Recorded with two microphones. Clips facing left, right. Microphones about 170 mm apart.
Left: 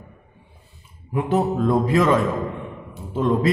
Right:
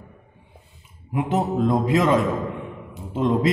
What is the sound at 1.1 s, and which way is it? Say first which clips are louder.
A man's voice: left 2 dB; 20° right (ahead or behind).